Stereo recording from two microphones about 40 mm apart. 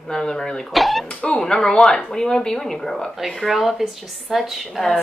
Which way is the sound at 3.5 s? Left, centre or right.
Centre.